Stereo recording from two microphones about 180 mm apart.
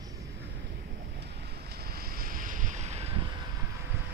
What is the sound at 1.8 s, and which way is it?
Boat, 55° right (ahead or behind).